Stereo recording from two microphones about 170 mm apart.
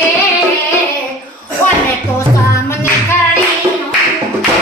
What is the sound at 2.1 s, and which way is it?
Music, 15° left (ahead or behind).